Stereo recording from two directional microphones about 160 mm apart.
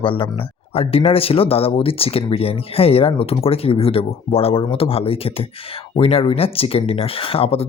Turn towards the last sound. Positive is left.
turn(degrees=35)  # may be behind; listen again after turning